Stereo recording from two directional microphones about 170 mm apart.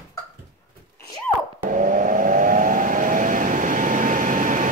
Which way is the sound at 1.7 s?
50° right (ahead or behind).